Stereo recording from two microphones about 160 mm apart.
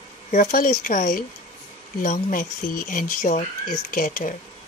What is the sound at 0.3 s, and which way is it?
Speech, 55° left (ahead or behind).